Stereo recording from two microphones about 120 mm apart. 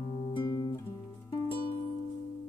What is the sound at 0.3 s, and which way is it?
Guitar, 40° left (ahead or behind).